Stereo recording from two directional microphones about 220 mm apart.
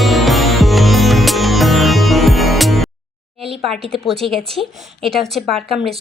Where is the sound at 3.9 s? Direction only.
Centre (ahead or behind).